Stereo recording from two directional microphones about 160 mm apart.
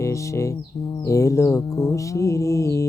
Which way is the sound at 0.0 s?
20° left (ahead or behind).